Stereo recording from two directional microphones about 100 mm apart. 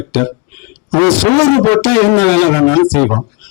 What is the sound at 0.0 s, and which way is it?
A man's voice, 20° left (ahead or behind).